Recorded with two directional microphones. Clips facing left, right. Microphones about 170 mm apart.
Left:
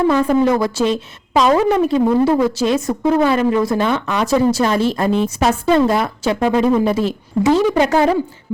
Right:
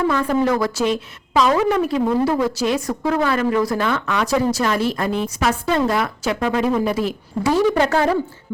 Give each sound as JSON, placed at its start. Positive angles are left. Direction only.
{"t": 0.1, "sound": "speech", "side_deg": 20}